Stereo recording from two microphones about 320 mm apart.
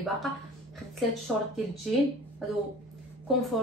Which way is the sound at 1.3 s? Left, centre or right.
Centre.